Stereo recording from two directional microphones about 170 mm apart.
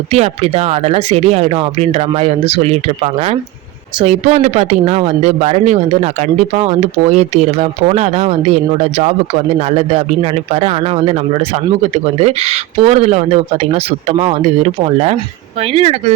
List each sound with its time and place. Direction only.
0.1 s speech: 40° right (ahead or behind)